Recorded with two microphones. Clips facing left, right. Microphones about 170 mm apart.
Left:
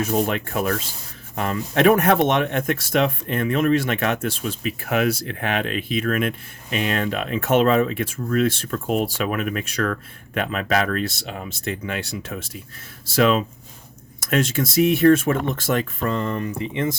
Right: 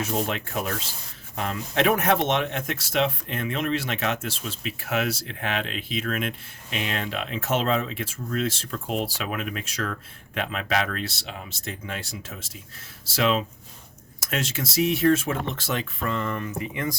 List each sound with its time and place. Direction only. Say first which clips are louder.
0.0 s speech: left 5 dB; 50° left (ahead or behind); by 17.0 s 25° left (ahead or behind)